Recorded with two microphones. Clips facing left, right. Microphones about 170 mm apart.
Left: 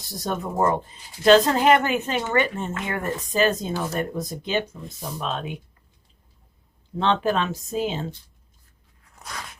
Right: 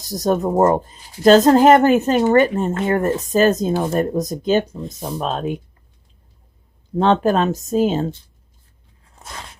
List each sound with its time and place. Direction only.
0.0 s speech: 40° right (ahead or behind)
6.9 s speech: 45° right (ahead or behind)
9.0 s crunch: 25° right (ahead or behind)